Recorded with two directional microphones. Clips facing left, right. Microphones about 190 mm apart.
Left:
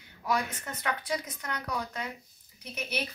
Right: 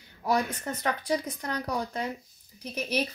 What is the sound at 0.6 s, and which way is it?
Speech, 35° right (ahead or behind).